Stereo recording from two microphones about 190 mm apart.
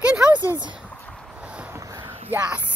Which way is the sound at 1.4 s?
5° right (ahead or behind).